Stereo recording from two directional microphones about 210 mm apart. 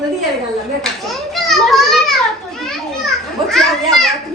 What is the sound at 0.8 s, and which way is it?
Children playing, centre (ahead or behind).